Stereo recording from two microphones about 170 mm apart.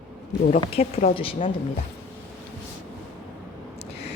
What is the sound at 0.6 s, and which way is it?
Speech, 35° left (ahead or behind).